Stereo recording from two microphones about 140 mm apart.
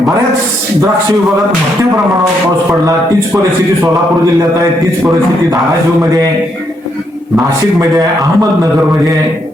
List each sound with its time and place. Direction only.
7.3 s a man's voice: 25° right (ahead or behind)